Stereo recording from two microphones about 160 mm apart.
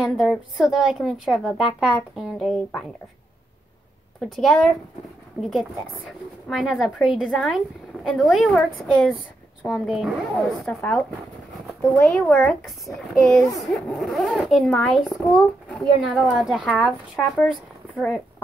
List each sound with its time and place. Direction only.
0.0 s speech: centre (ahead or behind)
4.2 s speech: centre (ahead or behind)
10.6 s speech: 10° left (ahead or behind)
12.1 s speech: 5° left (ahead or behind)